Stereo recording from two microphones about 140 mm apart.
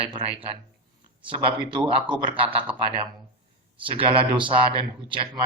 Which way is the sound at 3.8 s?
40° right (ahead or behind).